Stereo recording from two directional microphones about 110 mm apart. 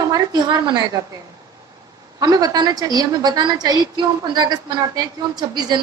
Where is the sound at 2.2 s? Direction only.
35° right (ahead or behind).